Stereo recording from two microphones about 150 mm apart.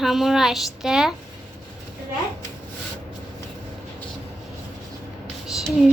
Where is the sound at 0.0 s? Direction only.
Centre (ahead or behind).